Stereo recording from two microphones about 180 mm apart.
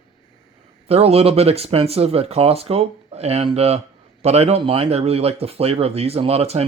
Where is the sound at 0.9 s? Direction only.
35° right (ahead or behind).